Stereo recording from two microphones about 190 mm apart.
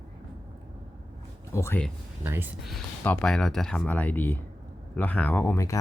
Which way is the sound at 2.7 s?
5° left (ahead or behind).